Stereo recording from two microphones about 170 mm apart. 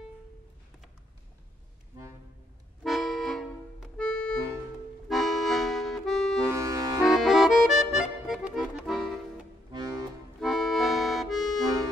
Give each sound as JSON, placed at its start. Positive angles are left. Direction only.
{"t": 2.8, "sound": "accordion", "side_deg": 0}
{"t": 6.4, "sound": "accordion", "side_deg": -15}
{"t": 7.0, "sound": "accordion", "side_deg": 0}
{"t": 9.7, "sound": "accordion", "side_deg": -25}
{"t": 10.4, "sound": "accordion", "side_deg": 0}